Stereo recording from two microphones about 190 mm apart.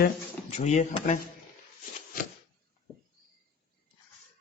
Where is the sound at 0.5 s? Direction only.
35° left (ahead or behind).